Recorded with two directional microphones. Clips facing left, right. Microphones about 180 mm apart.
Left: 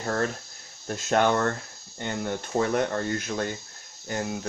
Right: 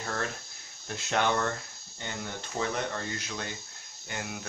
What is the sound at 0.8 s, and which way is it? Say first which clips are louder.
Speech: left 6 dB; 45° left (ahead or behind).